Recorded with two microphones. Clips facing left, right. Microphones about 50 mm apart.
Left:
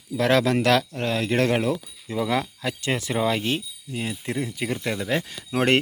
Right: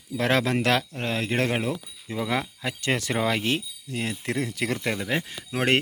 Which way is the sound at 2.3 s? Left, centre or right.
Right.